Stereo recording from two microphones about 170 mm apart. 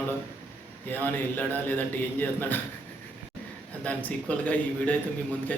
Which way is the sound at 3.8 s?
10° left (ahead or behind).